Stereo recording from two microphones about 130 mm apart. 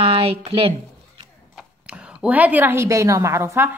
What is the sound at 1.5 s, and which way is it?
A woman's voice, 10° right (ahead or behind).